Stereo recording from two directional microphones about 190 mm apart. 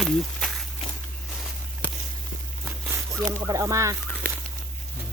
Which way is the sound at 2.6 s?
10° right (ahead or behind).